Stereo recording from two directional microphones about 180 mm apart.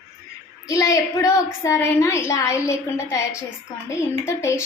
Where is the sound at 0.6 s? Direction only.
20° left (ahead or behind).